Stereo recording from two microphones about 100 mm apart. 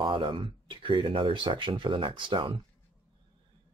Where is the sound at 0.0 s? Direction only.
50° right (ahead or behind).